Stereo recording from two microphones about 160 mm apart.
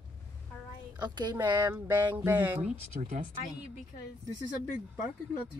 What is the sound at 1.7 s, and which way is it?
Speech, 15° right (ahead or behind).